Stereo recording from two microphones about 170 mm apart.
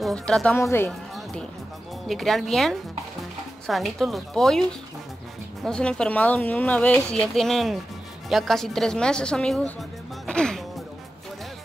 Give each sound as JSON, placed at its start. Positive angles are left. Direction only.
{"t": 0.0, "sound": "speech", "side_deg": 5}
{"t": 0.6, "sound": "speech", "side_deg": 15}
{"t": 0.8, "sound": "music", "side_deg": 5}
{"t": 2.0, "sound": "speech", "side_deg": 0}